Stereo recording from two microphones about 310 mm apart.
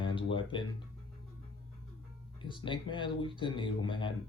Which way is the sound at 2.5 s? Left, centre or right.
Centre.